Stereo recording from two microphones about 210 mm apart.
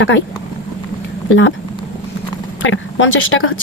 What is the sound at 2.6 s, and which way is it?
Speech, 65° left (ahead or behind).